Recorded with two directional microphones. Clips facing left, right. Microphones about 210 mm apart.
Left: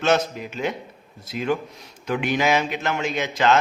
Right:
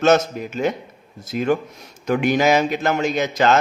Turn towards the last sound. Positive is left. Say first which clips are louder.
# right 3 dB
turn(degrees=-40)  # may be behind; listen again after turning